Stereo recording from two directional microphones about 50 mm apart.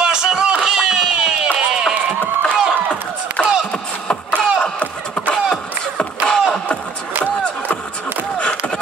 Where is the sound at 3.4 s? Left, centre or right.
Left.